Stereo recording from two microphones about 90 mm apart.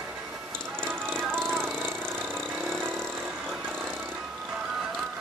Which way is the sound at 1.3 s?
25° right (ahead or behind).